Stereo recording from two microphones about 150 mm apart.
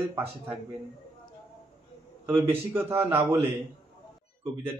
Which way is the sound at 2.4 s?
15° right (ahead or behind).